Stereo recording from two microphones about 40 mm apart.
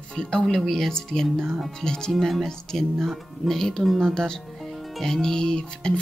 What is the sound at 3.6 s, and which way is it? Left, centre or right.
Speech, centre.